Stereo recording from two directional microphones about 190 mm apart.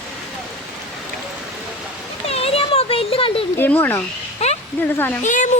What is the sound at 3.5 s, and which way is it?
Speech, 10° left (ahead or behind).